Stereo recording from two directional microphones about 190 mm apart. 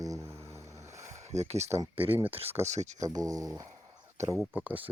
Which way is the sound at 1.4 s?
35° right (ahead or behind).